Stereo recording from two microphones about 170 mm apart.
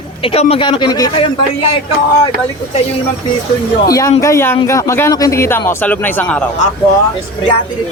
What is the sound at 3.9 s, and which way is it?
A man's voice, 20° left (ahead or behind).